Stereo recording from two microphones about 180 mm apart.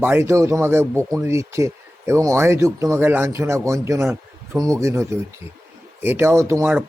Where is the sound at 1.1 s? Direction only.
15° right (ahead or behind).